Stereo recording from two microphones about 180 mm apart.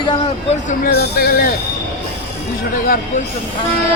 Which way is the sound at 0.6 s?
55° left (ahead or behind).